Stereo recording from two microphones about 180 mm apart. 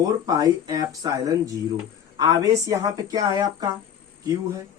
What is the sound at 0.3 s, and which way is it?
Speech, 20° right (ahead or behind).